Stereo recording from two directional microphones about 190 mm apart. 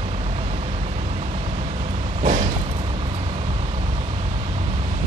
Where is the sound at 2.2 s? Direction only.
35° right (ahead or behind).